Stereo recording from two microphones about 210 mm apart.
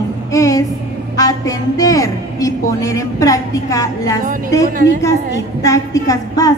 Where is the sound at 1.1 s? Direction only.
15° left (ahead or behind).